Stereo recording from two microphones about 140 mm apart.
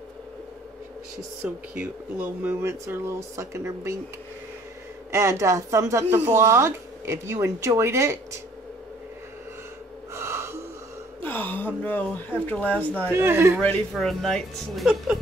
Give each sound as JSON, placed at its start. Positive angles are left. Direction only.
{"t": 1.4, "sound": "speech", "side_deg": -10}
{"t": 5.1, "sound": "speech", "side_deg": -20}
{"t": 10.1, "sound": "gasp", "side_deg": -20}
{"t": 11.1, "sound": "speech", "side_deg": 15}
{"t": 13.1, "sound": "speech", "side_deg": -15}
{"t": 13.9, "sound": "speech", "side_deg": 0}